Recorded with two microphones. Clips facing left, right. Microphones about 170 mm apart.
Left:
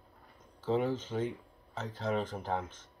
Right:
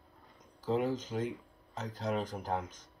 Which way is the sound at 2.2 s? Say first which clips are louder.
Left 1 dB; 40° right (ahead or behind).